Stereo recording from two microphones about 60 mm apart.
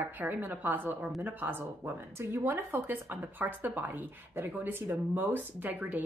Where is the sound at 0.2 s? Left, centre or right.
Right.